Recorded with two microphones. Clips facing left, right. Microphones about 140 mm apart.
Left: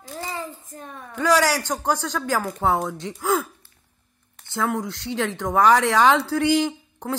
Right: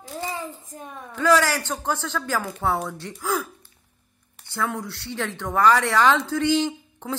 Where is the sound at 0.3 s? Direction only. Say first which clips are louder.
Even; 15° right (ahead or behind).